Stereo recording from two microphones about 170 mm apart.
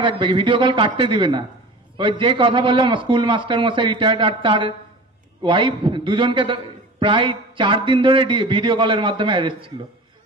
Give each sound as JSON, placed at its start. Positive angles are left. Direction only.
{"t": 0.0, "sound": "a man's voice", "side_deg": -30}